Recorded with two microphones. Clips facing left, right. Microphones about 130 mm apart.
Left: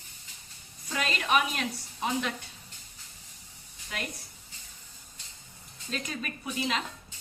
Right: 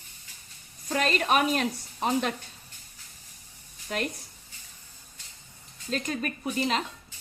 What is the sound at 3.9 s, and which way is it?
Speech, 45° right (ahead or behind).